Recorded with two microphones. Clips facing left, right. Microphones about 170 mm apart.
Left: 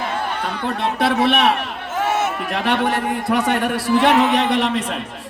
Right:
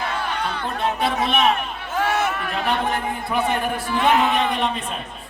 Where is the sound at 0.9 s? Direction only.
75° left (ahead or behind).